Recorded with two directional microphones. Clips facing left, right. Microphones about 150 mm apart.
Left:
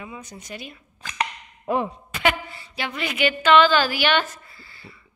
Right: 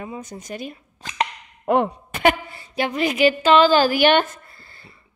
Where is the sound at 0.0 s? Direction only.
45° right (ahead or behind).